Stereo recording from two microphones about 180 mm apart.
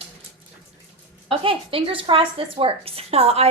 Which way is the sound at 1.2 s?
30° right (ahead or behind).